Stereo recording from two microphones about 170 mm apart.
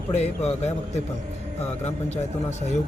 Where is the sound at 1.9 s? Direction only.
40° left (ahead or behind).